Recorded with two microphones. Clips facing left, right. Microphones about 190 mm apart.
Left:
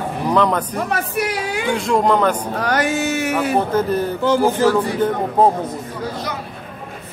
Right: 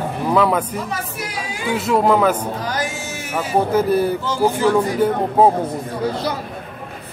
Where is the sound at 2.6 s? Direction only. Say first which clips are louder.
Left 6 dB; 65° left (ahead or behind).